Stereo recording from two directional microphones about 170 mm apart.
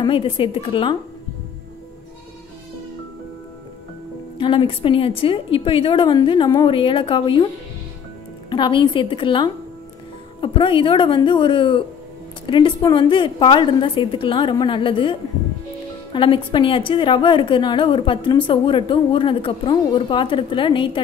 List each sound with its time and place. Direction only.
0.0 s a woman's voice: 30° left (ahead or behind)
4.4 s a woman's voice: 30° left (ahead or behind)
8.5 s a woman's voice: 30° left (ahead or behind)